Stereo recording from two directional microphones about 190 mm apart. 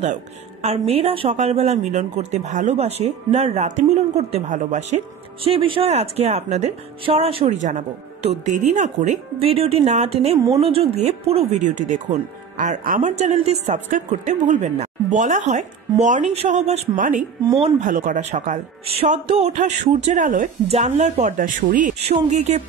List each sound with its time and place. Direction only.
0.0 s a woman's voice: 35° right (ahead or behind)